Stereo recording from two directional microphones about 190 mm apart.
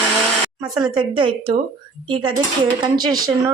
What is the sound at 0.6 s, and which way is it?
Speech, 20° right (ahead or behind).